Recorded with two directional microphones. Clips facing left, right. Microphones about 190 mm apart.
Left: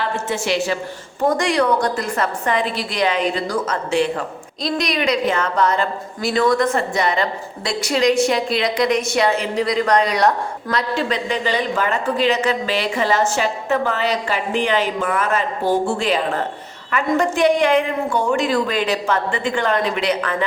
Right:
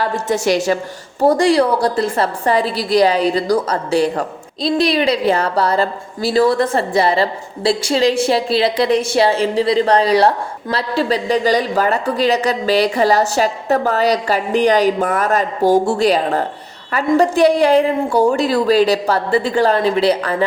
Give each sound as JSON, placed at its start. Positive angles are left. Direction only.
{"t": 0.0, "sound": "a woman's voice", "side_deg": -40}